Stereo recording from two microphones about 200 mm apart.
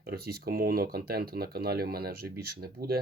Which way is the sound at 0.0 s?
50° right (ahead or behind).